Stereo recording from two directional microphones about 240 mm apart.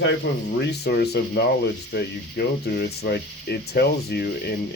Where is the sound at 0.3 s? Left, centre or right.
Left.